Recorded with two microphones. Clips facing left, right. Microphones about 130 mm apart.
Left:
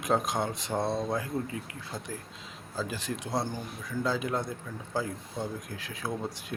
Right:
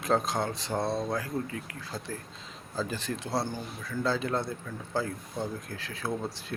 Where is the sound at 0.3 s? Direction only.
15° left (ahead or behind).